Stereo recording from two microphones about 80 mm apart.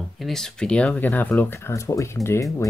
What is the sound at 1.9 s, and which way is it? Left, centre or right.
Speech, left.